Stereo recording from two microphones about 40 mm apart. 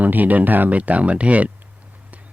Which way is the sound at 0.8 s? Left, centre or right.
Right.